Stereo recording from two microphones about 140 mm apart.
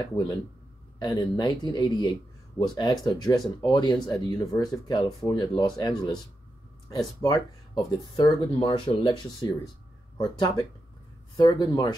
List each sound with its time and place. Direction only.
0.0 s speech: 25° left (ahead or behind)
7.2 s speech: 30° left (ahead or behind)